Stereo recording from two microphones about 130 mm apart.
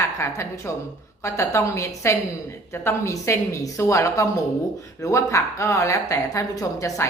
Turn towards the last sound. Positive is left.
turn(degrees=25)  # may be behind; listen again after turning